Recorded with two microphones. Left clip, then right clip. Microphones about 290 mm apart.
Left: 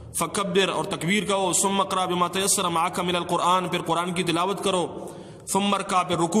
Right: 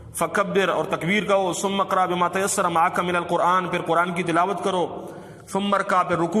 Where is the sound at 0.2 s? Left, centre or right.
Centre.